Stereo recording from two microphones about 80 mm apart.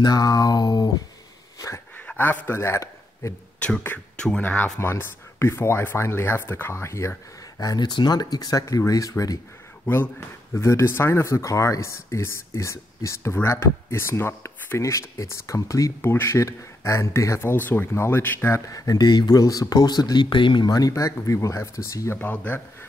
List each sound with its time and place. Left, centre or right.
0.0 s speech: left
2.1 s a man's voice: left
3.5 s speech: centre
4.7 s speech: left
7.7 s speech: left
10.5 s speech: left
14.8 s speech: left
16.0 s speech: left
18.7 s speech: left
20.6 s speech: left
20.9 s speech: left
22.2 s speech: left